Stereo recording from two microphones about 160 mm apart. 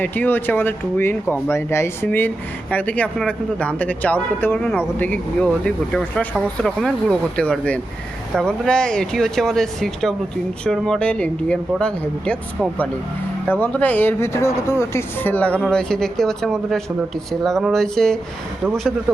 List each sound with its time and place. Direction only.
0.0 s speech: 10° left (ahead or behind)
13.5 s speech: 10° left (ahead or behind)